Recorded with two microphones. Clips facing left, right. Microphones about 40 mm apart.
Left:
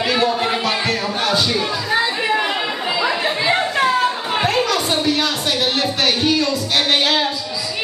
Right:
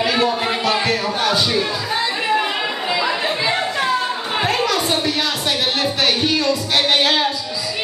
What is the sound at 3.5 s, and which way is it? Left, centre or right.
Chatter, centre.